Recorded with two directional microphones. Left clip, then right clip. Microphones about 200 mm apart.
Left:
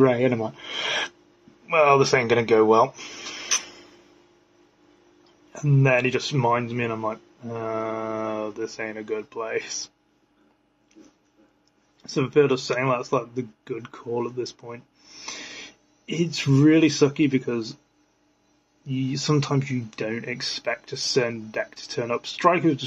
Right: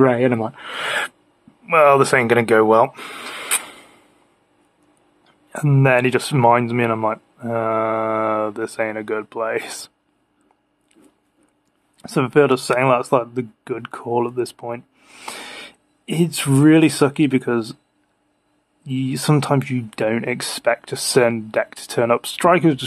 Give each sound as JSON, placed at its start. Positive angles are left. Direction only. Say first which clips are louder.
{"t": 0.0, "sound": "speech", "louder": "right 4 dB", "side_deg": -30}
{"t": 5.5, "sound": "speech", "louder": "right 5 dB", "side_deg": -40}
{"t": 12.0, "sound": "speech", "louder": "right 5 dB", "side_deg": -45}
{"t": 18.9, "sound": "speech", "louder": "right 4 dB", "side_deg": -45}